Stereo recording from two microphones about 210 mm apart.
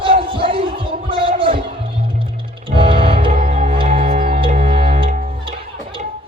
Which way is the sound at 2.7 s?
25° right (ahead or behind).